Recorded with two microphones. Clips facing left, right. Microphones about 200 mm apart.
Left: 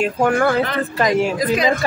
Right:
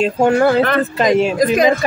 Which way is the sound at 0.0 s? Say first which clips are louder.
Right 4 dB; 25° right (ahead or behind).